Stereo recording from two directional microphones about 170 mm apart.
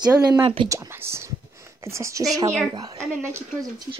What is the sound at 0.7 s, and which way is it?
Speech, 15° right (ahead or behind).